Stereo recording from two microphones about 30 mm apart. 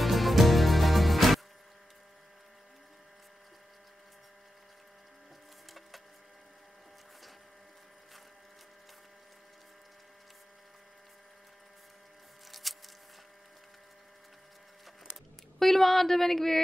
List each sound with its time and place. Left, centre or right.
0.0 s music: centre
12.4 s a sound: centre
15.6 s speech: centre